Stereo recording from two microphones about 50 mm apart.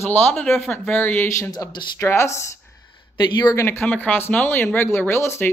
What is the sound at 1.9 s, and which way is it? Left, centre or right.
Speech, left.